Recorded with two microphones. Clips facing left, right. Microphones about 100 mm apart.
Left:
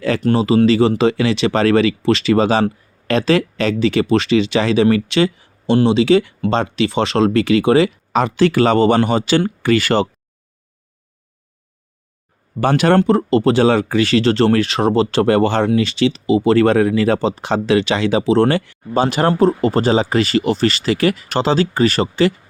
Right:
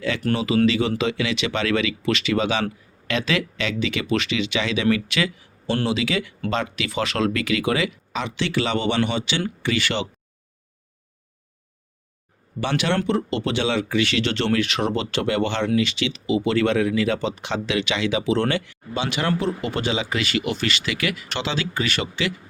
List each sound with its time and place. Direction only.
0.3 s speech: 35° left (ahead or behind)
8.1 s speech: 45° left (ahead or behind)
12.5 s speech: 45° left (ahead or behind)